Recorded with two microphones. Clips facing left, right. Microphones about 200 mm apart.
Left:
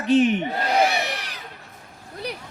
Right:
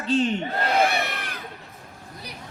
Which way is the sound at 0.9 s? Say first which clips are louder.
Left 1 dB; 55° right (ahead or behind).